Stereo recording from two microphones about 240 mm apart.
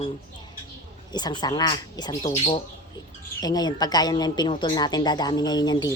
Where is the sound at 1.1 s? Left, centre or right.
Centre.